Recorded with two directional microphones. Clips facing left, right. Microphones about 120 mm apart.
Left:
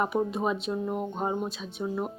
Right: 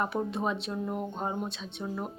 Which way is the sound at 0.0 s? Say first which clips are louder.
Left 3 dB; 5° left (ahead or behind).